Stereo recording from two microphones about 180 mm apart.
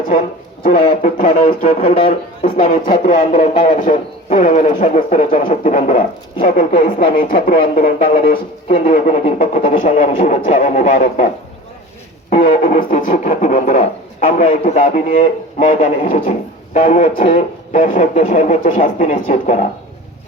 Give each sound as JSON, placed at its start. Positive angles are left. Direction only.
{"t": 0.0, "sound": "a man's voice", "side_deg": 45}
{"t": 0.8, "sound": "speech", "side_deg": 35}
{"t": 1.1, "sound": "speech", "side_deg": 50}
{"t": 1.8, "sound": "speech", "side_deg": 35}
{"t": 2.0, "sound": "speech", "side_deg": 45}
{"t": 3.2, "sound": "speech", "side_deg": 35}
{"t": 12.3, "sound": "speech", "side_deg": 45}